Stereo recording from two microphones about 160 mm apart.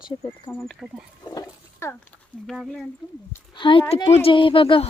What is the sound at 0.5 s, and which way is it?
Speech, centre (ahead or behind).